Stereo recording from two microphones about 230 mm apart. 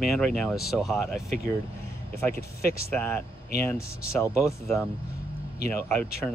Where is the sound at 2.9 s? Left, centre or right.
Centre.